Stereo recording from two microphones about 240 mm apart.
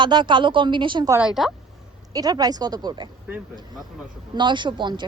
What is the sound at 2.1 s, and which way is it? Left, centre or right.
Speech, centre.